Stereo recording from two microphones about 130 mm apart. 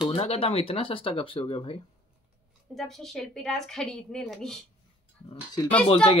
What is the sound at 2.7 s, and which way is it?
A woman's voice, centre (ahead or behind).